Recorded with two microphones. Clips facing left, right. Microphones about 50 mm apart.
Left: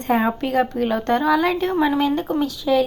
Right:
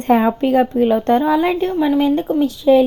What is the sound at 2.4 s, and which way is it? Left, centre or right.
Speech, right.